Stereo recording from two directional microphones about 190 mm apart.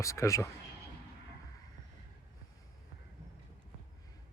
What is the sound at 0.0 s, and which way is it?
Speech, 15° left (ahead or behind).